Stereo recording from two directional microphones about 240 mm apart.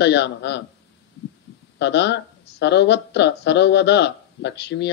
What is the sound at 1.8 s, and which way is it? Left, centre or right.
Speech, left.